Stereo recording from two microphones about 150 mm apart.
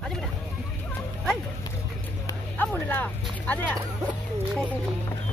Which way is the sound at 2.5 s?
10° left (ahead or behind).